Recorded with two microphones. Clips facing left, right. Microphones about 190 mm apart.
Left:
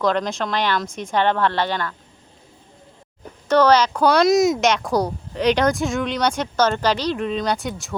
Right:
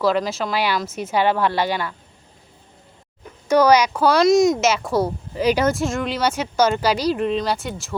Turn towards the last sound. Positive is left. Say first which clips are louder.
# left 1 dB
turn(degrees=0)  # may be behind; listen again after turning